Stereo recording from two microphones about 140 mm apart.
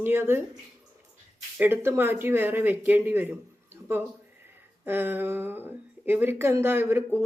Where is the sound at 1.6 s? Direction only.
15° right (ahead or behind).